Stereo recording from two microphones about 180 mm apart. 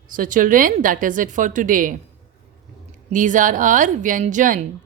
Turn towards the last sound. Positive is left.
turn(degrees=-45)  # may be behind; listen again after turning